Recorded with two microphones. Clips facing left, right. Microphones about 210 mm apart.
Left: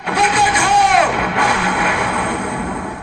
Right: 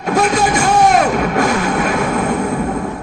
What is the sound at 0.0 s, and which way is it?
Music, 45° right (ahead or behind).